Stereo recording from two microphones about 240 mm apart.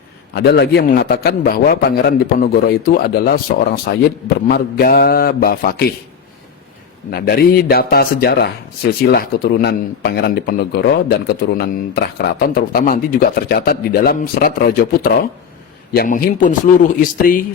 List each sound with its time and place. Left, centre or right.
0.3 s a man's voice: left
7.1 s a man's voice: left